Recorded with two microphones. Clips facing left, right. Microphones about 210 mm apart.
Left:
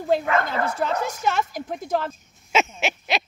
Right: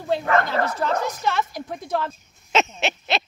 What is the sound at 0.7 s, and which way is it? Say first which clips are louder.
Speech: right 1 dB; 45° left (ahead or behind).